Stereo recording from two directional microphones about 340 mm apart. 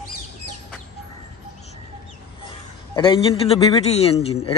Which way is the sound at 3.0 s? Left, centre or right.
Centre.